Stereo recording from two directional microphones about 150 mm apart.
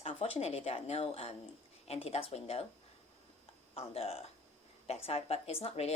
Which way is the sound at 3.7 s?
40° left (ahead or behind).